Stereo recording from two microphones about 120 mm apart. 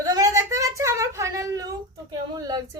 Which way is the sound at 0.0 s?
30° right (ahead or behind).